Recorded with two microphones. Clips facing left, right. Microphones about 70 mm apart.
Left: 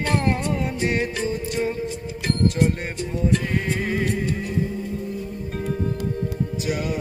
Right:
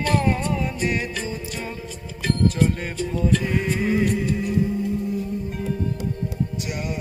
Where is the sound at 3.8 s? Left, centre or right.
Left.